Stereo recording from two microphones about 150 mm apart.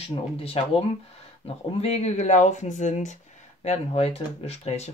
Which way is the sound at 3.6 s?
45° left (ahead or behind).